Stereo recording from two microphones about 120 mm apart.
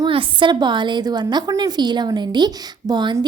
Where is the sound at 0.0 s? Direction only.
45° right (ahead or behind).